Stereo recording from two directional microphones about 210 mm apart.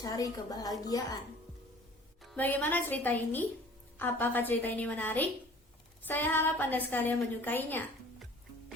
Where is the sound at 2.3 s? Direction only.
10° left (ahead or behind).